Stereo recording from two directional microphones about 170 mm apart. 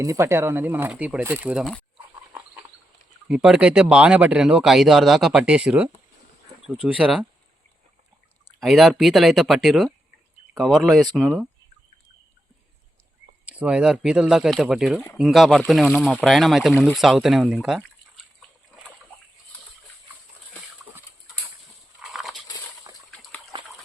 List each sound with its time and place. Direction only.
0.0 s speech: 15° right (ahead or behind)
3.2 s speech: 5° right (ahead or behind)
8.6 s speech: centre (ahead or behind)
13.4 s speech: 5° right (ahead or behind)
22.0 s a sound: centre (ahead or behind)
23.5 s dog: 25° right (ahead or behind)